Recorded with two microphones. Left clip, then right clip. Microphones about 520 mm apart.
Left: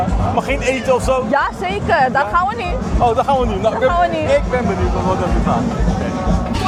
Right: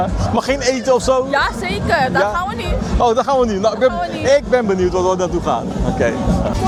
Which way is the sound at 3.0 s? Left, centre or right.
Right.